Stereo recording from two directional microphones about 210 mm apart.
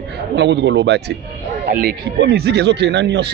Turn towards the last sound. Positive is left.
turn(degrees=-55)  # may be behind; listen again after turning